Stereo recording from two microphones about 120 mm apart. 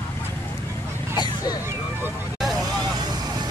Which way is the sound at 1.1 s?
35° left (ahead or behind).